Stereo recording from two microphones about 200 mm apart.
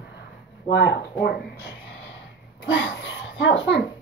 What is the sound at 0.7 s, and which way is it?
Speech, 60° left (ahead or behind).